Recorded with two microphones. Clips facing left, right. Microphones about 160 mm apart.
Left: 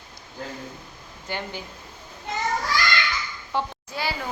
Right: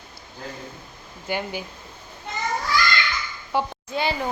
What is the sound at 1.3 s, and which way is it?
Speech, 10° right (ahead or behind).